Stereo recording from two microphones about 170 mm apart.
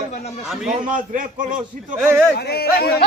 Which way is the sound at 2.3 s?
70° left (ahead or behind).